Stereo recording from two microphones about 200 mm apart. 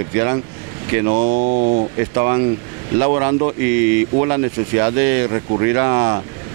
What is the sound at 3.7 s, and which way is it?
Speech, 15° right (ahead or behind).